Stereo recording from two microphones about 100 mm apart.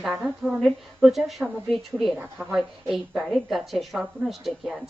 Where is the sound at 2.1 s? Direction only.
15° right (ahead or behind).